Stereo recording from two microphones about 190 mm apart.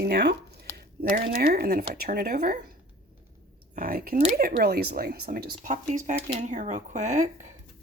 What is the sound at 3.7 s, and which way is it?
Speech, 50° right (ahead or behind).